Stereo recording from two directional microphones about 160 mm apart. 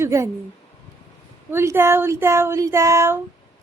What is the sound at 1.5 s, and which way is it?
Child singing, 15° right (ahead or behind).